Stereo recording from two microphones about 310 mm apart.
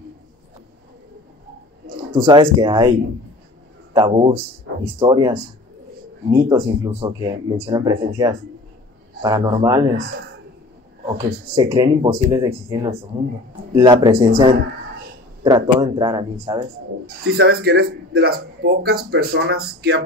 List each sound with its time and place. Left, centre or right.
2.2 s speech: centre
3.9 s speech: centre
11.5 s speech: centre
17.4 s speech: right